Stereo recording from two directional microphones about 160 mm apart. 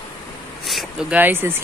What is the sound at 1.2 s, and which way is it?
Speech, 15° right (ahead or behind).